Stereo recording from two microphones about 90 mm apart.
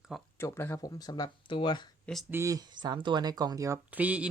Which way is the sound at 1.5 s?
65° left (ahead or behind).